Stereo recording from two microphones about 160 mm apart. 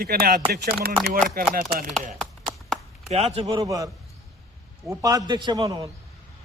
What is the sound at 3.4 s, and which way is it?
A man's voice, 25° right (ahead or behind).